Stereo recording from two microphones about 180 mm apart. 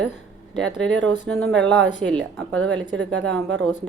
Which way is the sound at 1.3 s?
5° left (ahead or behind).